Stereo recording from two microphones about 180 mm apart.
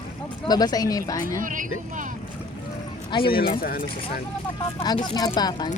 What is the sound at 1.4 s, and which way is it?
Speech, 45° right (ahead or behind).